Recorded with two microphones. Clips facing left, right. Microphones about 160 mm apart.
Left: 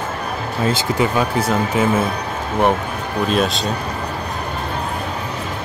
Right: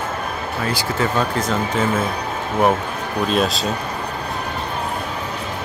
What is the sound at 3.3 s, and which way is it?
Speech, centre (ahead or behind).